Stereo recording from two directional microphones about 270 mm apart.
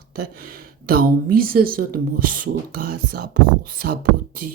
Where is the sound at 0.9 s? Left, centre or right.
Right.